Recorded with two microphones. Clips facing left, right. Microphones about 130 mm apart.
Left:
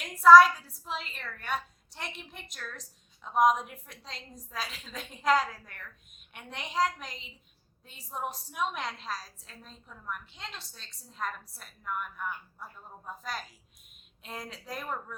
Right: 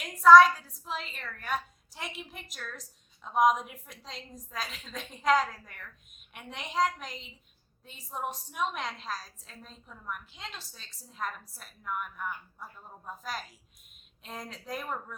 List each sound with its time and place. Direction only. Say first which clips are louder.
0.0 s a woman's voice: even; centre (ahead or behind)